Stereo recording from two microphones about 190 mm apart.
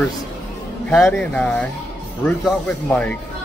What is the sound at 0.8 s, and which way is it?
Speech, 5° left (ahead or behind).